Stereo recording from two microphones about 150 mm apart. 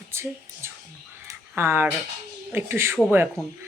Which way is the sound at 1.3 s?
15° right (ahead or behind).